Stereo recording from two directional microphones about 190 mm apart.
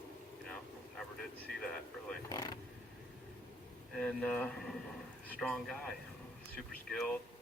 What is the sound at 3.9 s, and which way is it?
A man's voice, 5° left (ahead or behind).